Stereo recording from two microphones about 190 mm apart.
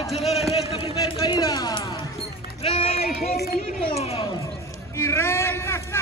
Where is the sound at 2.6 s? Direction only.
30° left (ahead or behind).